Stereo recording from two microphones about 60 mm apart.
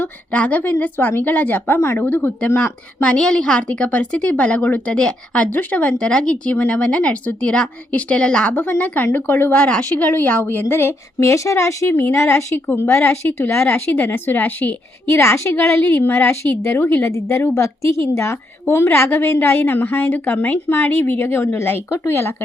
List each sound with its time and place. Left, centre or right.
0.0 s a woman's voice: left
3.0 s a woman's voice: centre
9.1 s a woman's voice: left
9.5 s a woman's voice: centre; by 10.9 s left
11.2 s speech: left
12.5 s a woman's voice: left
15.1 s a woman's voice: left
16.3 s speech: left
16.8 s a woman's voice: left
17.1 s a woman's voice: left